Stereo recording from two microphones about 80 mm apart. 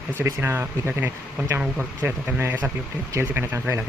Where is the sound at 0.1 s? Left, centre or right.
Right.